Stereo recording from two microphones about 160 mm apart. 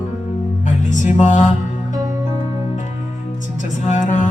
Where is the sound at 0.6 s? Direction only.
50° left (ahead or behind).